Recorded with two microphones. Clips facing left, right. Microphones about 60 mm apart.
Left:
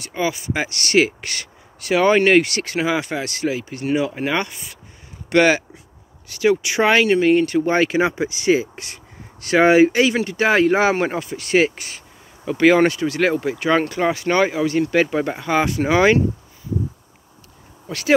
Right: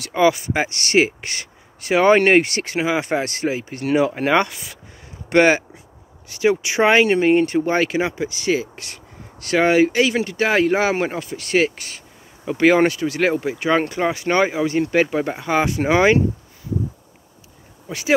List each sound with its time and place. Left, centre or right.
0.0 s speech: right
0.7 s speech: centre
3.0 s speech: right
3.8 s speech: right
4.5 s speech: right
5.3 s speech: right
6.2 s speech: centre
7.6 s speech: centre
8.1 s speech: centre
12.4 s speech: centre
14.3 s speech: right
15.0 s speech: centre
15.8 s speech: right
17.8 s speech: centre